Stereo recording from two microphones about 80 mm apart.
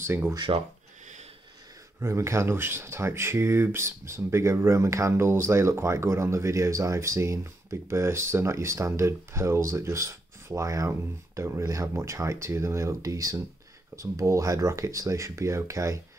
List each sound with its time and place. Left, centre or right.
0.0 s speech: right
0.5 s speech: right
2.0 s speech: right